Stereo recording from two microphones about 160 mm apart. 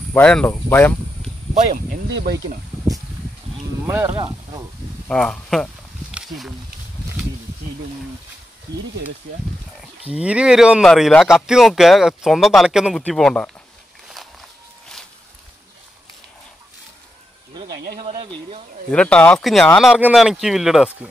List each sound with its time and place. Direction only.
0.1 s speech: 5° left (ahead or behind)
1.5 s speech: 50° right (ahead or behind)
2.1 s speech: 85° right
3.8 s speech: 15° right (ahead or behind)
4.1 s speech: 30° right (ahead or behind)
5.0 s speech: 5° left (ahead or behind)
6.1 s a sound: centre (ahead or behind)
10.1 s speech: 5° right (ahead or behind)
17.9 s a sound: 30° right (ahead or behind)
18.9 s speech: 5° left (ahead or behind)